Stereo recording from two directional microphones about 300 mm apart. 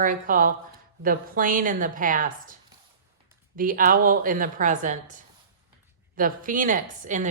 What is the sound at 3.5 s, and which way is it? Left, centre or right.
A woman's voice, right.